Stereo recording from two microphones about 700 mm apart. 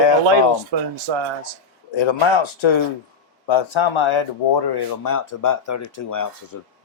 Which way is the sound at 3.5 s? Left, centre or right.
Left.